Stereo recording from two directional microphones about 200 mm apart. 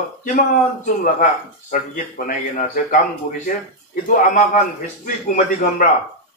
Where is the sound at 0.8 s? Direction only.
45° left (ahead or behind).